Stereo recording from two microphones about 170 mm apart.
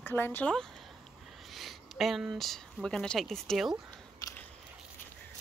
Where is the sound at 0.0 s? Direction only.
15° left (ahead or behind).